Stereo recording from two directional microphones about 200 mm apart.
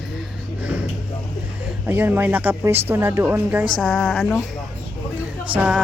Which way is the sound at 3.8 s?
5° left (ahead or behind).